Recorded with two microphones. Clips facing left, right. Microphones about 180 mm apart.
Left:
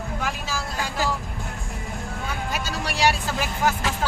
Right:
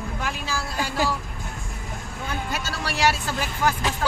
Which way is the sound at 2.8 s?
15° left (ahead or behind).